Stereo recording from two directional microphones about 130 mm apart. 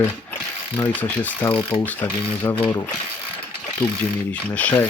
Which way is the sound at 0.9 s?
15° left (ahead or behind).